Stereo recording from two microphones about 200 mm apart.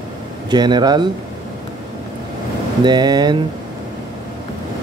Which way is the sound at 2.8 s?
20° right (ahead or behind).